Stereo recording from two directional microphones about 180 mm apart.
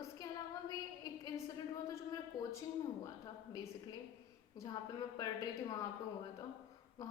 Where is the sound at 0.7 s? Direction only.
20° left (ahead or behind).